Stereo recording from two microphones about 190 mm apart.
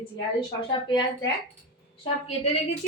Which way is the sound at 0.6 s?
25° left (ahead or behind).